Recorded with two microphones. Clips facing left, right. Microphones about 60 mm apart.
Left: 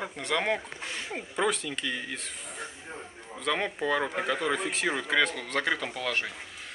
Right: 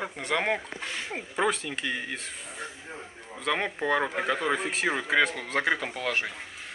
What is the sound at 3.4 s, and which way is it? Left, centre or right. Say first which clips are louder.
Speech: right 1 dB; centre.